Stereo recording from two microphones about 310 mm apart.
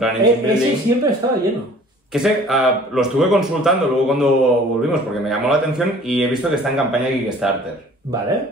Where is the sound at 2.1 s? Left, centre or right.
Centre.